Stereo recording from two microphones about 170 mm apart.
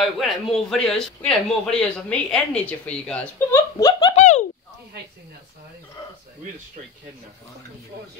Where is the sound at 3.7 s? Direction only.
20° left (ahead or behind).